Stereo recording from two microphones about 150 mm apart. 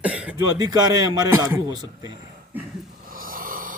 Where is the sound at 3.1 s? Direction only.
70° right (ahead or behind).